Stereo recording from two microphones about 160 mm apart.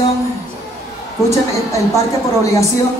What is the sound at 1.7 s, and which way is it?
Speech, 20° left (ahead or behind).